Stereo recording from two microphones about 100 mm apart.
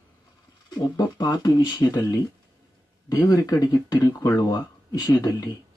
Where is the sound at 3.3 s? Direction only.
35° left (ahead or behind).